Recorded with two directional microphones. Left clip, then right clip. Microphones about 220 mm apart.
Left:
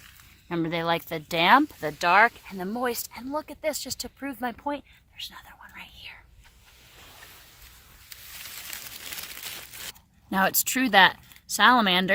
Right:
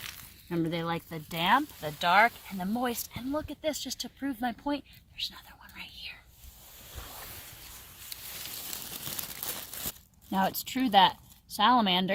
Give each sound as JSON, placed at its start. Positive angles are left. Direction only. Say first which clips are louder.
{"t": 0.4, "sound": "speech", "louder": "left 5 dB", "side_deg": 40}
{"t": 1.9, "sound": "speech", "louder": "left 3 dB", "side_deg": 40}
{"t": 5.2, "sound": "whispering", "louder": "right 2 dB", "side_deg": 15}
{"t": 10.2, "sound": "speech", "louder": "left 5 dB", "side_deg": 60}